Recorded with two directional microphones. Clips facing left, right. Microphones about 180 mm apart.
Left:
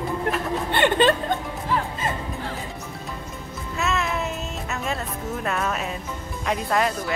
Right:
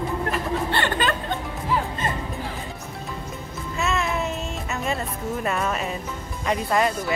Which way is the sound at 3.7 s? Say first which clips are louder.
Even; centre (ahead or behind).